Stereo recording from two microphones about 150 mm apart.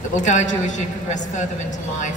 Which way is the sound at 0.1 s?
55° left (ahead or behind).